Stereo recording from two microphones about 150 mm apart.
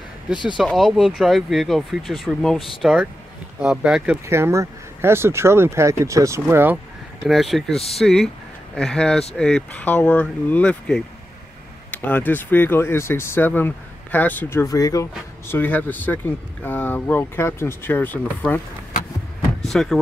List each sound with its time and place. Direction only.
0.3 s speech: 30° left (ahead or behind)
0.6 s speech: centre (ahead or behind)
7.2 s speech: centre (ahead or behind); by 15.0 s 25° left (ahead or behind)
15.4 s speech: 15° left (ahead or behind)
19.6 s speech: centre (ahead or behind)